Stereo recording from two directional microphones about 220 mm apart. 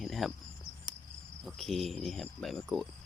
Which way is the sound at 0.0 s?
Centre (ahead or behind).